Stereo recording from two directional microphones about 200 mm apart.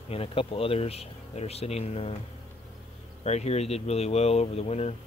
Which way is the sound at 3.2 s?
30° left (ahead or behind).